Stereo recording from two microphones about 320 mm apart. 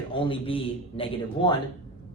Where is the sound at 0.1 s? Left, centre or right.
Centre.